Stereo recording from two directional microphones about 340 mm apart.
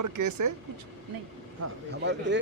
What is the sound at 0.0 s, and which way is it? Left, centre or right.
Speech, right.